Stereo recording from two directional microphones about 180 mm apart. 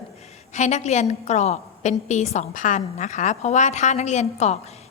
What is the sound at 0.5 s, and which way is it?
A woman's voice, 40° left (ahead or behind).